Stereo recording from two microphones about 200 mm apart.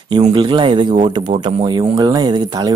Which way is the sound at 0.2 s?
25° right (ahead or behind).